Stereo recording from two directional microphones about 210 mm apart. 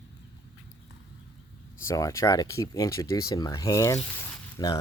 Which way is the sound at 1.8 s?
15° left (ahead or behind).